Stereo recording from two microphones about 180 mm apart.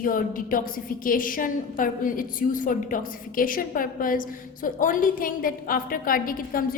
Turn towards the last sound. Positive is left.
turn(degrees=50)  # may be behind; listen again after turning